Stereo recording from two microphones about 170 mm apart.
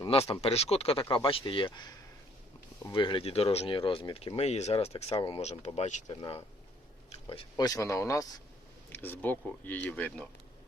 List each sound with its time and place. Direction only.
0.0 s speech: 35° left (ahead or behind)
2.9 s speech: 30° left (ahead or behind)
7.1 s a sound: 35° left (ahead or behind)
7.5 s speech: 20° left (ahead or behind)